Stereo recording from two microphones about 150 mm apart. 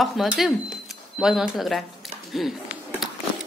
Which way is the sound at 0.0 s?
Centre (ahead or behind).